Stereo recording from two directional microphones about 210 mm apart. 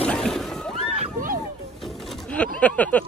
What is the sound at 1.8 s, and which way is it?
Bird, 5° left (ahead or behind).